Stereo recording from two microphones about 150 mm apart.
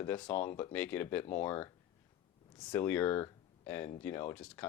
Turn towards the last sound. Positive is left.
turn(degrees=10)  # may be behind; listen again after turning